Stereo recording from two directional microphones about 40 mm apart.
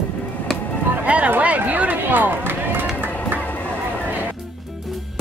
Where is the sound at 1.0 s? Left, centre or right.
Right.